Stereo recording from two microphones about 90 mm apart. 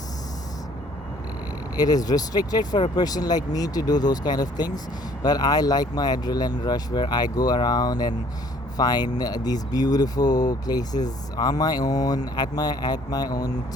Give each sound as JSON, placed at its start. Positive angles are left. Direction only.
{"t": 1.7, "sound": "speech", "side_deg": 45}